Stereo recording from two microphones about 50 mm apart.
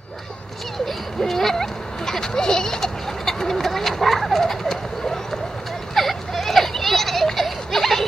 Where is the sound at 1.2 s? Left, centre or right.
Centre.